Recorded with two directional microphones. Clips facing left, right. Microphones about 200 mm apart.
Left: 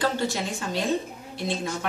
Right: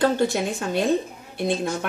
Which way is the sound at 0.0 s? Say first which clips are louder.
Right 6 dB; 55° right (ahead or behind).